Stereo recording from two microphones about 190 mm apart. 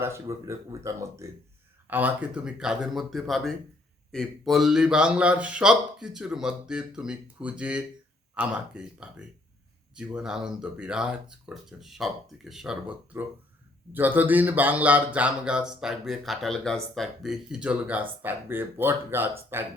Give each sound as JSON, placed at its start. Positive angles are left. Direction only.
{"t": 0.0, "sound": "speech", "side_deg": -15}